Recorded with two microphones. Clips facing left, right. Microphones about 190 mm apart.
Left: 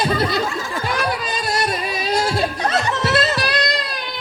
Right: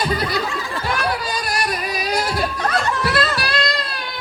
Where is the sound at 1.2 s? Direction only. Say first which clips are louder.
Left 2 dB; 25° left (ahead or behind).